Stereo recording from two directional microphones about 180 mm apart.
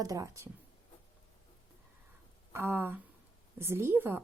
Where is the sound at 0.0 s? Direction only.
20° right (ahead or behind).